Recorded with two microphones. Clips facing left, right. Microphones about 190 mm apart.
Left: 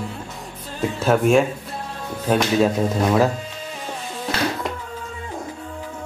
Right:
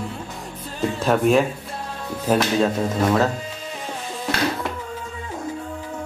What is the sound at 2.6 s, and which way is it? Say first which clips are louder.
Speech: left 2 dB; 10° left (ahead or behind).